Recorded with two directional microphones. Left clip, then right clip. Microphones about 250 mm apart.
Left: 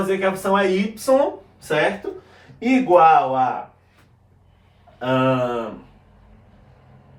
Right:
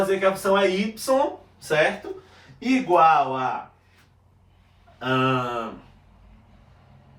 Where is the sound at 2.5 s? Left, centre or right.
Centre.